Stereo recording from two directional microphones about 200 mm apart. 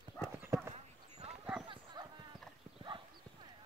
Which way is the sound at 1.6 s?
20° right (ahead or behind).